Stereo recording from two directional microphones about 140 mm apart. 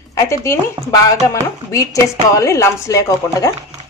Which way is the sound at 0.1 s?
20° left (ahead or behind).